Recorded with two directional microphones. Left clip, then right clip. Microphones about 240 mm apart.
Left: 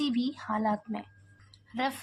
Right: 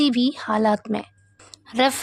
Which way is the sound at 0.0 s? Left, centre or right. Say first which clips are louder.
Right 11 dB; right.